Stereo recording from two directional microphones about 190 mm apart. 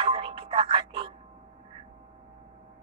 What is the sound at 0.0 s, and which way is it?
Music, 30° right (ahead or behind).